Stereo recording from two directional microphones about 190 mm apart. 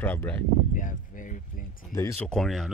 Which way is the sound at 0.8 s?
45° left (ahead or behind).